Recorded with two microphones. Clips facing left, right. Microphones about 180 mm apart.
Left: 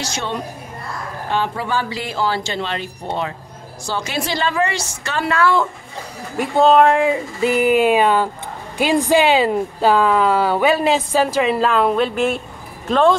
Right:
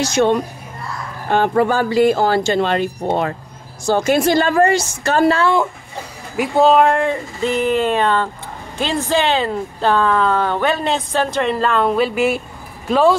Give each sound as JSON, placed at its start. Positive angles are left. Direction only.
{"t": 0.0, "sound": "speech", "side_deg": -50}
{"t": 5.3, "sound": "speech", "side_deg": -25}
{"t": 6.3, "sound": "speech", "side_deg": -5}